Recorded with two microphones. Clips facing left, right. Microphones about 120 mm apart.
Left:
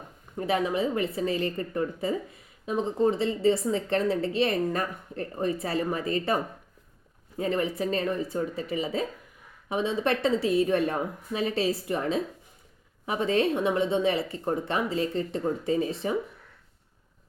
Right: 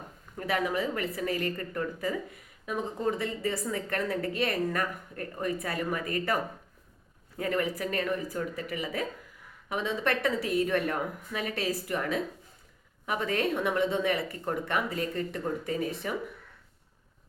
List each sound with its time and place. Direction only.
0.3 s a woman's voice: 25° left (ahead or behind)